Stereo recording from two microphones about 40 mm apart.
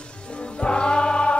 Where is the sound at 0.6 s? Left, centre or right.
Left.